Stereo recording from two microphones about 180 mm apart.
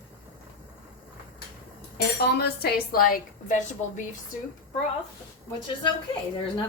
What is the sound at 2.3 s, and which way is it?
A woman's voice, 60° left (ahead or behind).